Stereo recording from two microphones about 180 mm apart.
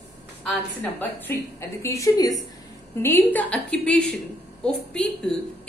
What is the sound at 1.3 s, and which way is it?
A woman's voice, 15° left (ahead or behind).